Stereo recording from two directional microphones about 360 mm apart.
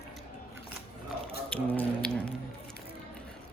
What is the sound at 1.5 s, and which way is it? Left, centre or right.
Speech, centre.